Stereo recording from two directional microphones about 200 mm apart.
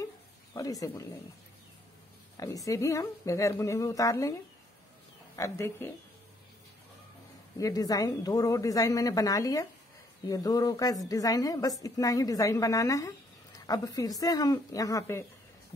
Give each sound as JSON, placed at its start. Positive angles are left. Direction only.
{"t": 0.6, "sound": "a woman's voice", "side_deg": 15}
{"t": 2.3, "sound": "a woman's voice", "side_deg": 15}
{"t": 7.5, "sound": "a woman's voice", "side_deg": 15}